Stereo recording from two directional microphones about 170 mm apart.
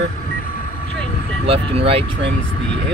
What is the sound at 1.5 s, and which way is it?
Speech, 35° right (ahead or behind).